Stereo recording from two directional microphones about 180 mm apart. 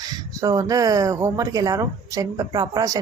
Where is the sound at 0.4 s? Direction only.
20° right (ahead or behind).